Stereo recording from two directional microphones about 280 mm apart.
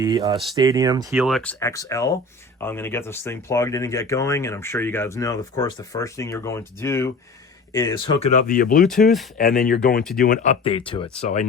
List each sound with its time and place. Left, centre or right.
0.0 s speech: centre
1.1 s speech: centre; by 11.4 s left